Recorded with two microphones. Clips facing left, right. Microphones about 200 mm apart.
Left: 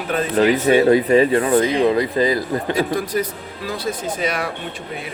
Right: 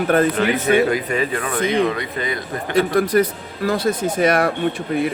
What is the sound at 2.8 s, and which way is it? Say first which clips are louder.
Speech: right 9 dB; 60° right (ahead or behind).